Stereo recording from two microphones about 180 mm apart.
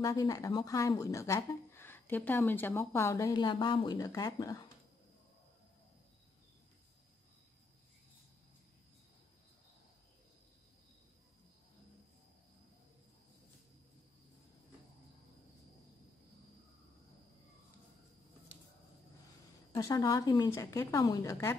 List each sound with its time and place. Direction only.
0.0 s speech: 20° left (ahead or behind)
19.7 s a woman's voice: 20° left (ahead or behind)